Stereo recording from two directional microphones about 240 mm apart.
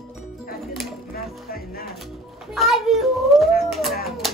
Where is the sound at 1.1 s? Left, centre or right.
Left.